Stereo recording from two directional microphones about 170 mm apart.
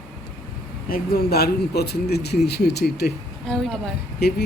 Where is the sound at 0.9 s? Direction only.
60° left (ahead or behind).